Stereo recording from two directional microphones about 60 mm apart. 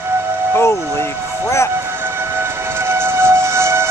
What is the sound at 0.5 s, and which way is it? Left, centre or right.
Music, left.